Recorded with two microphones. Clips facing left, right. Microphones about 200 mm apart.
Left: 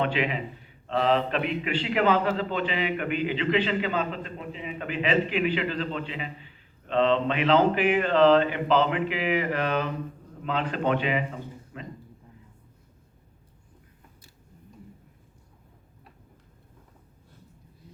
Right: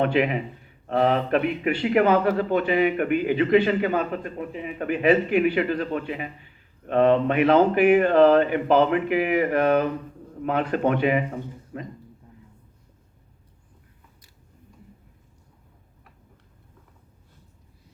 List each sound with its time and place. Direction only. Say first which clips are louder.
0.0 s a man's voice: right 5 dB; 50° right (ahead or behind)